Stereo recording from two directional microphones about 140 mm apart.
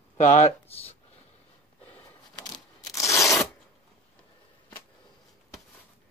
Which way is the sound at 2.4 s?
25° left (ahead or behind).